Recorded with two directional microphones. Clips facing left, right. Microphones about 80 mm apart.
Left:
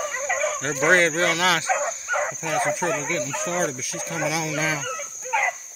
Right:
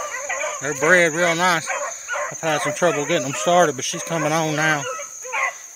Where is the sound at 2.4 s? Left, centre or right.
Right.